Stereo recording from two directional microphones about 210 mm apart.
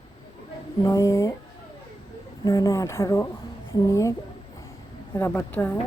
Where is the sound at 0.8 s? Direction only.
15° left (ahead or behind).